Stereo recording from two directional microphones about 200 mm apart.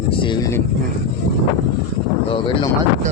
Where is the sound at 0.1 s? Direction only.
25° left (ahead or behind).